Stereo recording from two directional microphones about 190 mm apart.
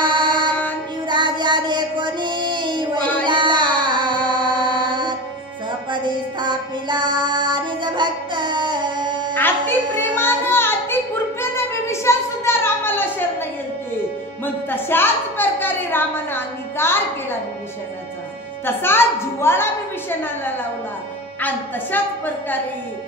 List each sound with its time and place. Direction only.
0.0 s music: 25° right (ahead or behind)
1.0 s child singing: 25° right (ahead or behind)
3.3 s music: 25° right (ahead or behind)
9.9 s child singing: 10° left (ahead or behind)
11.4 s a sound: 15° left (ahead or behind)
18.7 s a woman's voice: 10° left (ahead or behind)